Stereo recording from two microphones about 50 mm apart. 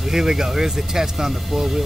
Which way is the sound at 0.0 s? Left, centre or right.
Centre.